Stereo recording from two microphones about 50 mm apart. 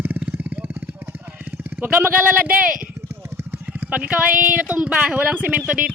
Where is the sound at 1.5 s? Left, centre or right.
Right.